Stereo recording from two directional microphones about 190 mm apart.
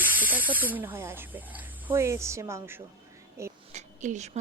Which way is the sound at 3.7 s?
40° right (ahead or behind).